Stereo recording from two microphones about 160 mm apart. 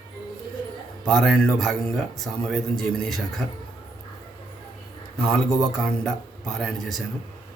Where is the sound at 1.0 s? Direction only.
5° left (ahead or behind).